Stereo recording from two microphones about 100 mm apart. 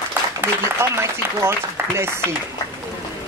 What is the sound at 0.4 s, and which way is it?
A woman's voice, 25° right (ahead or behind).